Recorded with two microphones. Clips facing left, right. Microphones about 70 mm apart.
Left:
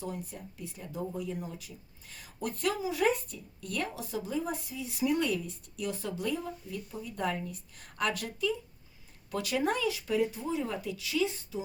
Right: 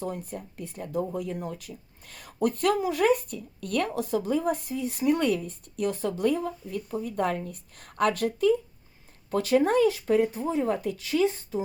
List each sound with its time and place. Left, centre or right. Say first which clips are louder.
0.0 s speech: right 5 dB; right